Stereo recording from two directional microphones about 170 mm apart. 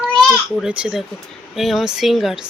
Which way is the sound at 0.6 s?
5° right (ahead or behind).